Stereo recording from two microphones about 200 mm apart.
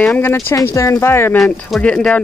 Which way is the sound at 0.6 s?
15° left (ahead or behind).